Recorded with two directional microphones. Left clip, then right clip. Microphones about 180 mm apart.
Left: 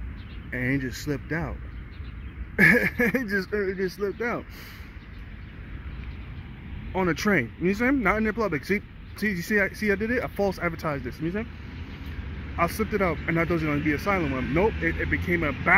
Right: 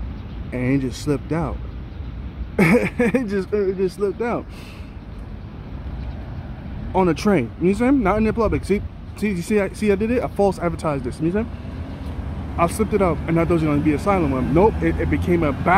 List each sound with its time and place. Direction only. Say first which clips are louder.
0.5 s speech: right 5 dB; 5° right (ahead or behind)
6.9 s speech: right 6 dB; 5° right (ahead or behind)
9.2 s speech: right 3 dB; 20° right (ahead or behind)
9.5 s speech: right 5 dB; centre (ahead or behind)
12.5 s speech: right 6 dB; centre (ahead or behind)